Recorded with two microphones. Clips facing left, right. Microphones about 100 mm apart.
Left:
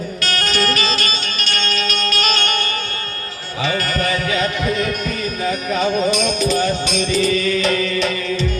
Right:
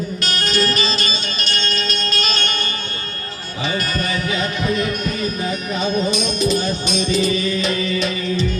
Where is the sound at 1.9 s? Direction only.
55° left (ahead or behind).